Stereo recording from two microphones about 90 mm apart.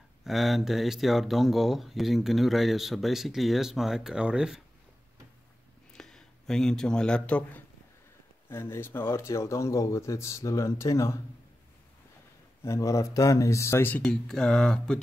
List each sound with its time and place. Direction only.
0.2 s speech: centre (ahead or behind)
5.9 s speech: 5° left (ahead or behind)
8.5 s speech: 25° left (ahead or behind)
12.6 s speech: 35° left (ahead or behind)
14.0 s speech: 5° left (ahead or behind)